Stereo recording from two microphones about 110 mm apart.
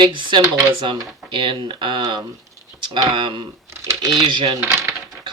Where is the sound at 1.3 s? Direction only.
50° right (ahead or behind).